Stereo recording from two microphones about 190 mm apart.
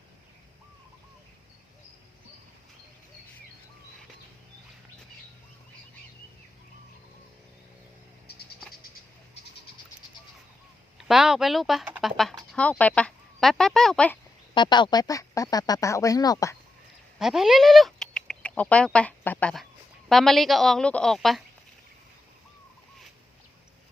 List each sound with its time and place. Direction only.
10.9 s speech: centre (ahead or behind)
14.5 s speech: 25° left (ahead or behind)
17.2 s a sound: centre (ahead or behind)
18.9 s a woman's voice: 10° left (ahead or behind)